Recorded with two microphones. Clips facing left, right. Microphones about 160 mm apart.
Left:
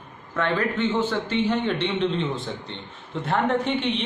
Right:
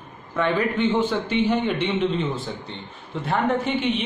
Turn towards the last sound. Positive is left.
turn(degrees=-5)  # may be behind; listen again after turning